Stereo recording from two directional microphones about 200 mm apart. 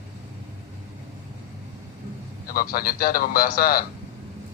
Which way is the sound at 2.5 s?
45° left (ahead or behind).